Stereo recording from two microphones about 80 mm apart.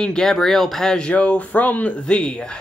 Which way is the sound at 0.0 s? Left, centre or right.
Centre.